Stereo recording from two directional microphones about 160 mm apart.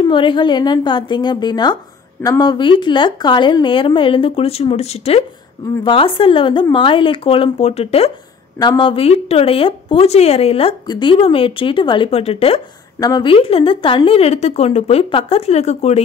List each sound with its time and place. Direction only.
0.0 s a woman's voice: 30° left (ahead or behind)
8.5 s speech: 30° left (ahead or behind)